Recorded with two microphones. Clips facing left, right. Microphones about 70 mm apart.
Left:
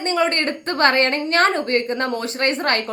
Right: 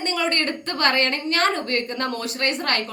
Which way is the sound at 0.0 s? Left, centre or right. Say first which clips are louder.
Left 4 dB; left.